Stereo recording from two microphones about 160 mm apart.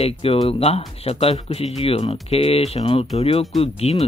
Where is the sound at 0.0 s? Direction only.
35° left (ahead or behind).